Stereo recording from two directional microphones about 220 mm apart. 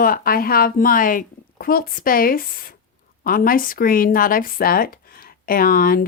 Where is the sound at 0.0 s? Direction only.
40° left (ahead or behind).